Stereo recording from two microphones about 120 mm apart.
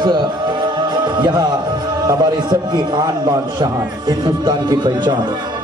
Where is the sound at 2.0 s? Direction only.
35° right (ahead or behind).